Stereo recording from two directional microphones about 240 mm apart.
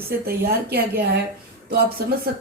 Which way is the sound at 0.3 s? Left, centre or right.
Right.